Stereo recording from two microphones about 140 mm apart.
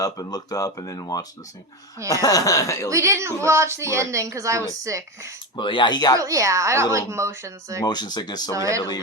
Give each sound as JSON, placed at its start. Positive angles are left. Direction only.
{"t": 0.0, "sound": "speech", "side_deg": 25}
{"t": 2.2, "sound": "speech", "side_deg": 25}
{"t": 2.9, "sound": "a woman's voice", "side_deg": -20}
{"t": 5.5, "sound": "speech", "side_deg": 35}
{"t": 6.1, "sound": "a woman's voice", "side_deg": -25}
{"t": 7.9, "sound": "speech", "side_deg": 30}
{"t": 8.5, "sound": "a woman's voice", "side_deg": -20}